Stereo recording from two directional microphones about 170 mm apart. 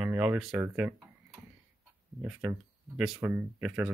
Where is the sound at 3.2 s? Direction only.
15° right (ahead or behind).